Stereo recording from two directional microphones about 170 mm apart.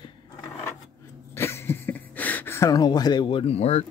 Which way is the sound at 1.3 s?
15° left (ahead or behind).